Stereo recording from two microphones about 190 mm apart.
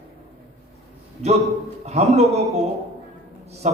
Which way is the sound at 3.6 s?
35° right (ahead or behind).